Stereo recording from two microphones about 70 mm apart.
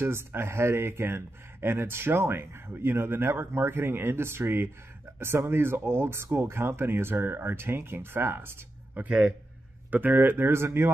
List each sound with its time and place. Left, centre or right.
0.0 s speech: right
8.9 s speech: right